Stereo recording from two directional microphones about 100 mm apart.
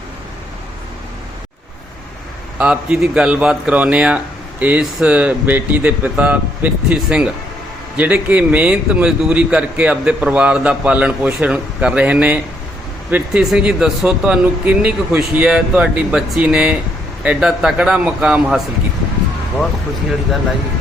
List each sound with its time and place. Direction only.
2.6 s a man's voice: 10° right (ahead or behind)